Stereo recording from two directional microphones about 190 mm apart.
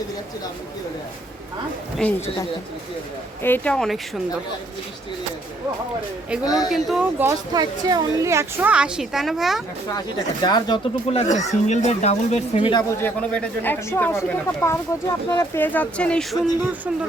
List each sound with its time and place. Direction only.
2.0 s speech: 5° left (ahead or behind)
3.4 s speech: 10° left (ahead or behind)
6.4 s speech: 20° left (ahead or behind)
6.7 s speech: centre (ahead or behind)
10.4 s speech: 20° left (ahead or behind)
11.2 s speech: 40° left (ahead or behind)
13.0 s speech: 5° left (ahead or behind)